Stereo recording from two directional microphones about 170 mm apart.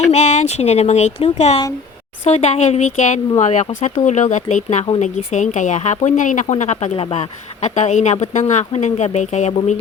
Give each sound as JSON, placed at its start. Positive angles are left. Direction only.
{"t": 0.1, "sound": "speech", "side_deg": 40}